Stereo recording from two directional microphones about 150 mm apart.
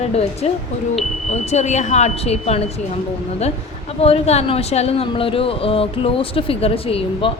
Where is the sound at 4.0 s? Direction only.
45° left (ahead or behind).